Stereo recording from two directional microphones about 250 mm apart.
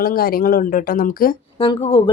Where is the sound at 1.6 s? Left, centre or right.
Left.